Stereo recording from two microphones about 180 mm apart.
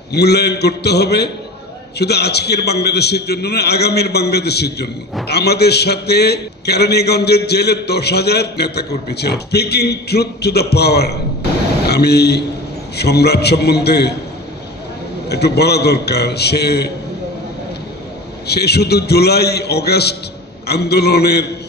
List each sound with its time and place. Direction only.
0.1 s a man's voice: 65° left (ahead or behind)
15.2 s a man's voice: 65° left (ahead or behind)
18.5 s a man's voice: 65° left (ahead or behind)